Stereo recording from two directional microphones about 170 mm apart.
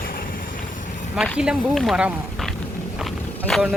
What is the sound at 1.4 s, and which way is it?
Speech, 5° right (ahead or behind).